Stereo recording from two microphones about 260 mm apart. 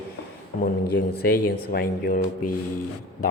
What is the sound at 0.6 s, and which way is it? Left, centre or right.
Speech, left.